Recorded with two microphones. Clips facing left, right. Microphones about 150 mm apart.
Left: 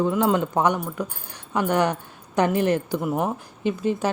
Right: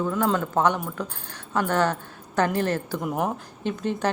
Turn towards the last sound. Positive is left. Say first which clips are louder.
# left 2 dB
turn(degrees=10)  # may be behind; listen again after turning